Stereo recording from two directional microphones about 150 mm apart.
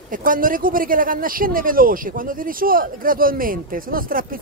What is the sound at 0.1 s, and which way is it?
Speech, 65° right (ahead or behind).